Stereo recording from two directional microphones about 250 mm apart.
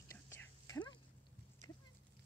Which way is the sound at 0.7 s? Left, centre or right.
Centre.